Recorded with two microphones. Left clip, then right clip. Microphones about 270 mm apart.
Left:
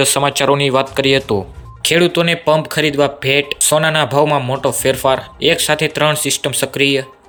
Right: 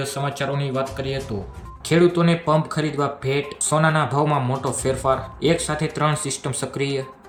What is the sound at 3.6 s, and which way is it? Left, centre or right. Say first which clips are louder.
Speech: left 4 dB; centre.